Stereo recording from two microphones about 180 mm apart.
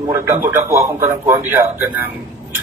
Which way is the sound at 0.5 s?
15° right (ahead or behind).